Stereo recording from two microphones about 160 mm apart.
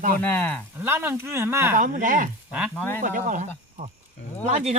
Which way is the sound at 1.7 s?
55° right (ahead or behind).